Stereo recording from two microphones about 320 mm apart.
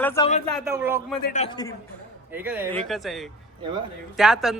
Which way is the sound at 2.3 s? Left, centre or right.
Centre.